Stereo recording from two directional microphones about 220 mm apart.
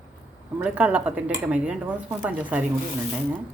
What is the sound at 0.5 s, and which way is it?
Speech, 5° right (ahead or behind).